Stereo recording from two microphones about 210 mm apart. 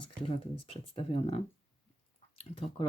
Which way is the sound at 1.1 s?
25° left (ahead or behind).